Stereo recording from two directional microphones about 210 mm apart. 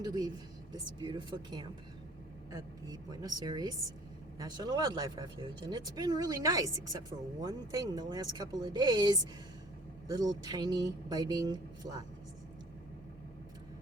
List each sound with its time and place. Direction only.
0.0 s speech: 20° right (ahead or behind)